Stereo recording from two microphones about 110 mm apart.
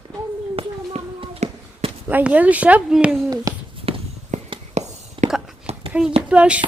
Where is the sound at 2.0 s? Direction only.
15° right (ahead or behind).